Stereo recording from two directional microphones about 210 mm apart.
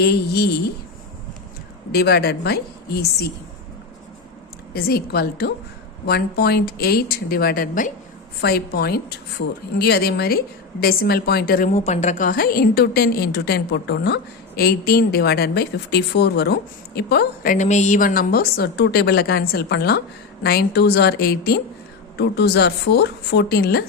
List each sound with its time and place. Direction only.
0.0 s a woman's voice: 50° left (ahead or behind)
1.9 s a woman's voice: 50° left (ahead or behind)
4.7 s a woman's voice: 45° left (ahead or behind)
11.7 s a woman's voice: 30° left (ahead or behind); by 23.8 s 50° left (ahead or behind)